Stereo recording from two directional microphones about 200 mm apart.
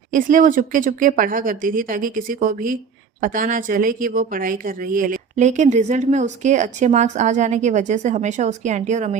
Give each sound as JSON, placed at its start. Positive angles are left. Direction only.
{"t": 0.1, "sound": "speech", "side_deg": -40}